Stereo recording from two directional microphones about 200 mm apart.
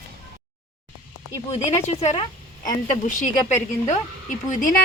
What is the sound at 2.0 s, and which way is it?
Speech, 25° left (ahead or behind).